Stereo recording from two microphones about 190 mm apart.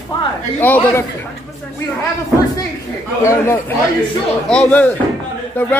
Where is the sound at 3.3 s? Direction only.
10° left (ahead or behind).